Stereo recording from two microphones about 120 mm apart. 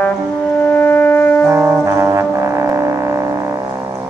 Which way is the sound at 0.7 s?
15° left (ahead or behind).